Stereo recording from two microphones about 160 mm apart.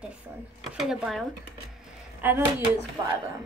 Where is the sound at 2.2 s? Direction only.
15° right (ahead or behind).